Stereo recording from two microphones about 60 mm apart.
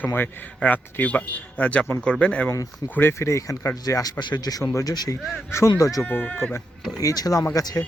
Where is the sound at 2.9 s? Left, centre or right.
Left.